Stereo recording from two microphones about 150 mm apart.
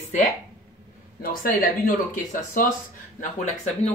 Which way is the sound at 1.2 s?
75° left (ahead or behind).